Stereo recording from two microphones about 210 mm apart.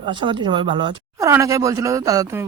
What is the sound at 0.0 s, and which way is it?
A woman's voice, 20° right (ahead or behind).